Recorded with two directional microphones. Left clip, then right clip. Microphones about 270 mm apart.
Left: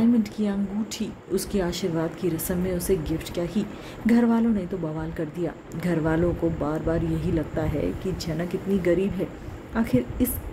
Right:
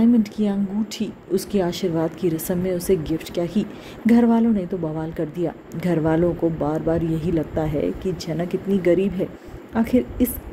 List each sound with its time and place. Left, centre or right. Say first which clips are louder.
0.0 s a woman's voice: right 4 dB; centre